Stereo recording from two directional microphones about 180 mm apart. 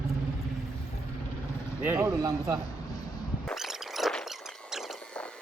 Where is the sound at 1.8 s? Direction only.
15° right (ahead or behind).